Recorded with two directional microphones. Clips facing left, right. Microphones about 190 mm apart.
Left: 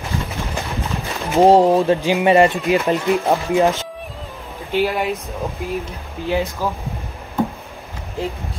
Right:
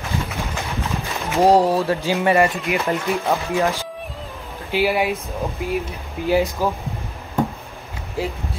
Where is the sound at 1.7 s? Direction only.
15° left (ahead or behind).